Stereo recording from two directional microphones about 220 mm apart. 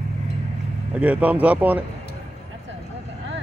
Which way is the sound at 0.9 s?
5° right (ahead or behind).